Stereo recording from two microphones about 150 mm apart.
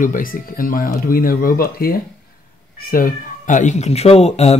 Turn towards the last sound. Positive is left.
turn(degrees=45)  # may be behind; listen again after turning